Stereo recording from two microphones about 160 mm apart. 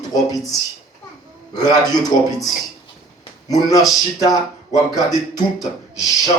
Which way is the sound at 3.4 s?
25° left (ahead or behind).